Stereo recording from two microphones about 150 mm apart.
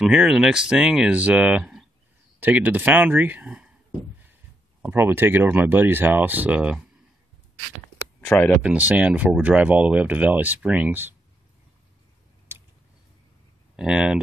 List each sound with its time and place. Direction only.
0.1 s speech: 5° right (ahead or behind)
4.8 s speech: 15° right (ahead or behind)
8.2 s speech: 10° left (ahead or behind)
8.6 s speech: 10° right (ahead or behind)
12.5 s tick-tock: 15° right (ahead or behind)
13.7 s speech: 5° right (ahead or behind)